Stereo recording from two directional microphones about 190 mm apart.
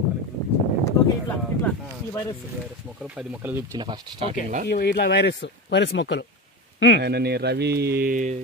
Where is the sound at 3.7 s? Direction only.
25° right (ahead or behind).